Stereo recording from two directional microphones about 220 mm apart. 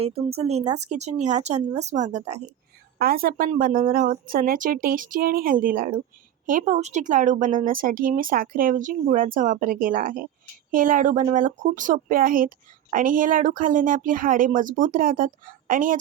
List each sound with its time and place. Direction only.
0.3 s speech: 30° right (ahead or behind)
3.0 s speech: 40° right (ahead or behind)